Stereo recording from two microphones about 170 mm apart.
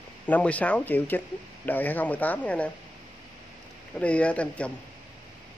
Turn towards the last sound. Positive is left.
turn(degrees=5)  # may be behind; listen again after turning